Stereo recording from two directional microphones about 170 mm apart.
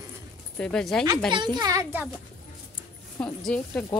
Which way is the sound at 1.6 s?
20° right (ahead or behind).